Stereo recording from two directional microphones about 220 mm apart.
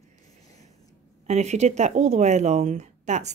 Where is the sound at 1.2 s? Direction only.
30° right (ahead or behind).